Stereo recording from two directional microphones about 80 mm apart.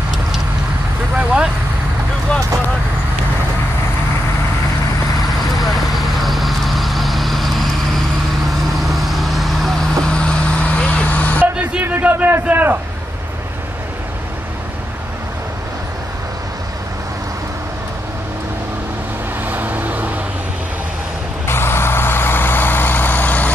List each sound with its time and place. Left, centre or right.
1.1 s speech: centre
5.6 s vehicle: centre
10.0 s vehicle: centre
11.6 s a sound: right
19.4 s vehicle: right
21.5 s vehicle: left